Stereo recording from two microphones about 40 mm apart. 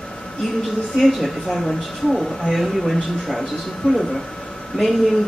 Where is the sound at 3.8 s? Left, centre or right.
Left.